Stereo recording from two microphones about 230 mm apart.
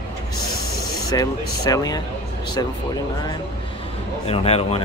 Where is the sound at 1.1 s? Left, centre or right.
Centre.